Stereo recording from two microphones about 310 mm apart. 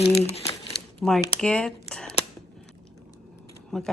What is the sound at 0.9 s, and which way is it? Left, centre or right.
Speech, centre.